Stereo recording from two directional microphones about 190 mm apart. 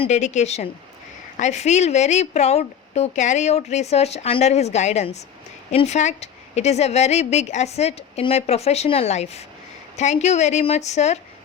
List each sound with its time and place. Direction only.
0.0 s a woman's voice: 35° left (ahead or behind)